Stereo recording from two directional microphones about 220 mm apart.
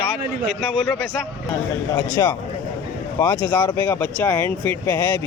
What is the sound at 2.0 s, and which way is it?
Speech, 15° left (ahead or behind).